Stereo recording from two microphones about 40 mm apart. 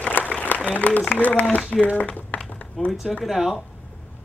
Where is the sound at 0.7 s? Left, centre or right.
Left.